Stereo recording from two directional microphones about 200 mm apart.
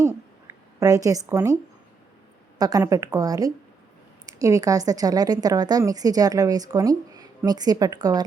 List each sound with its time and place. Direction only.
0.0 s a sound: 15° right (ahead or behind)
1.3 s a woman's voice: 15° right (ahead or behind)
2.6 s a woman's voice: 20° right (ahead or behind)